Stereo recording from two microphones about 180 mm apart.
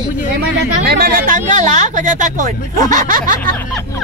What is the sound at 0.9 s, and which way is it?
Speech, 50° right (ahead or behind).